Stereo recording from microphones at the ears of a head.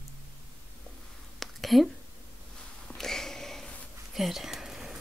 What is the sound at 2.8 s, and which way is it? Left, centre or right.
Sniff, centre.